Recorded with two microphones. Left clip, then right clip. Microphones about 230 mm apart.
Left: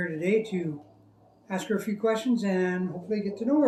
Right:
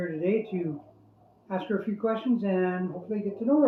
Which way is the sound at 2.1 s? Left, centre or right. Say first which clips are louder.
Left 1 dB; centre.